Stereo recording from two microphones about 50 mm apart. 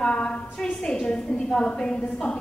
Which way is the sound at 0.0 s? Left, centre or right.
Left.